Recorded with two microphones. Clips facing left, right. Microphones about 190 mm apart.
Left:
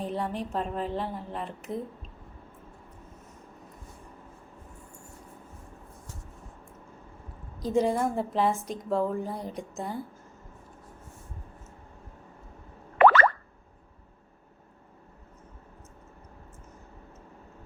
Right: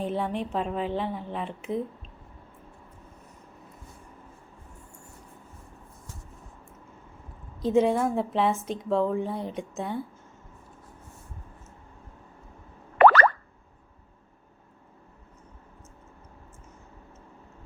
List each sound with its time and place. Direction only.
0.0 s a woman's voice: centre (ahead or behind)
7.7 s a woman's voice: centre (ahead or behind)
13.0 s plop: 40° right (ahead or behind)